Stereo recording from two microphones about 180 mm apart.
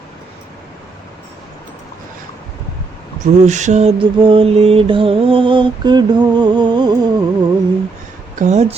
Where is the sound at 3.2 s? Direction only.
40° right (ahead or behind); by 6.9 s 25° right (ahead or behind).